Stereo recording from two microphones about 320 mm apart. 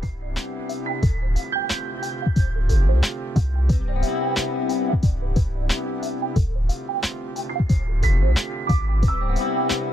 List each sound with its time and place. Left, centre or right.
0.4 s music: centre